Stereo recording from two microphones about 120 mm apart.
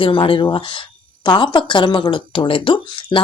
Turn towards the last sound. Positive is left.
turn(degrees=45)  # may be behind; listen again after turning